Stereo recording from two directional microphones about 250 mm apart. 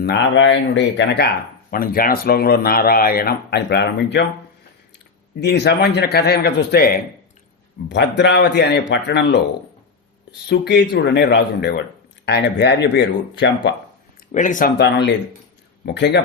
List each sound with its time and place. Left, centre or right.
0.0 s speech: left
5.4 s speech: left
10.5 s speech: left
14.3 s speech: left
14.8 s speech: left